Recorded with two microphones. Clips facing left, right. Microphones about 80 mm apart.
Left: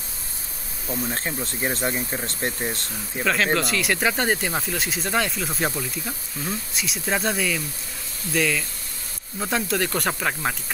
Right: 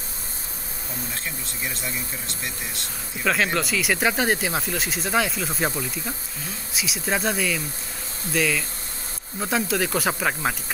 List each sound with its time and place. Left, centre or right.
1.1 s speech: left
3.5 s speech: centre